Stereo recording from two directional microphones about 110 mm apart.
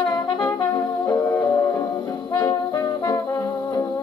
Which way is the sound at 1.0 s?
35° left (ahead or behind).